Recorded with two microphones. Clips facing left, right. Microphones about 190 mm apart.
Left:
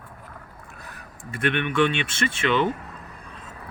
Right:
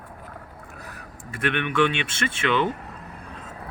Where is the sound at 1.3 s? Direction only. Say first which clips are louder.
Left 1 dB; 10° right (ahead or behind).